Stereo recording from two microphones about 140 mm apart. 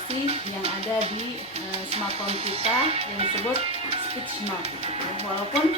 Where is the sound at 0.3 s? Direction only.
45° right (ahead or behind).